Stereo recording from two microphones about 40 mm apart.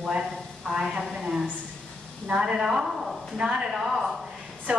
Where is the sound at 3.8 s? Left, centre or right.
Centre.